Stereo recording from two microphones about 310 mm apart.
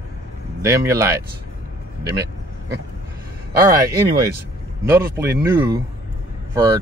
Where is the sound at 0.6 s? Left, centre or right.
Centre.